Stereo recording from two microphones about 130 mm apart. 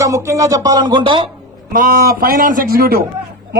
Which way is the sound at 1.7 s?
90° right.